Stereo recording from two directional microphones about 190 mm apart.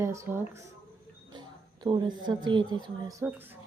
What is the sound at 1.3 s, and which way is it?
Speech, 25° right (ahead or behind).